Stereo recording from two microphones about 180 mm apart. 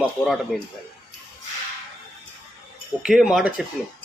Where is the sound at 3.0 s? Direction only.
5° right (ahead or behind).